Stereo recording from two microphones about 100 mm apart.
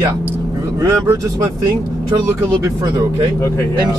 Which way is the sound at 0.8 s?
30° right (ahead or behind).